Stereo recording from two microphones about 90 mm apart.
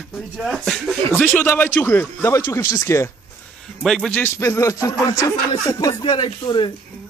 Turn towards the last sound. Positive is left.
turn(degrees=65)  # may be behind; listen again after turning